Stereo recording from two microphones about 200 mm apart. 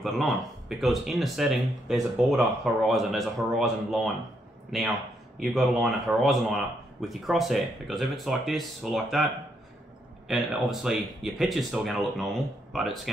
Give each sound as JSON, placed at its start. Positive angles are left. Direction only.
{"t": 0.0, "sound": "speech", "side_deg": 0}
{"t": 5.4, "sound": "speech", "side_deg": 0}